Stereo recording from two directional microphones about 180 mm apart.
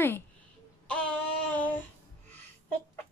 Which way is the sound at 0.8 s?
5° left (ahead or behind).